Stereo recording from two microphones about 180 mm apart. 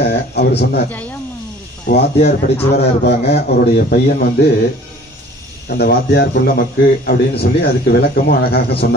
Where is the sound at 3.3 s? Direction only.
60° left (ahead or behind).